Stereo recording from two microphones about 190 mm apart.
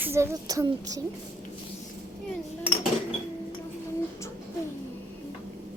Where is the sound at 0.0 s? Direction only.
15° right (ahead or behind).